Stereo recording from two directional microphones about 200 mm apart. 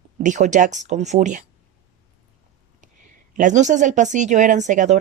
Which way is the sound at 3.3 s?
40° right (ahead or behind).